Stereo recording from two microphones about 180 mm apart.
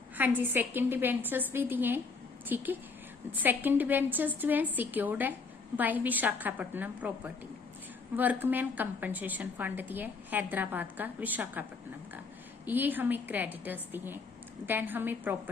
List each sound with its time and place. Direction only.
0.2 s a woman's voice: 10° right (ahead or behind)
8.1 s a woman's voice: 10° right (ahead or behind)
12.6 s a woman's voice: 10° right (ahead or behind)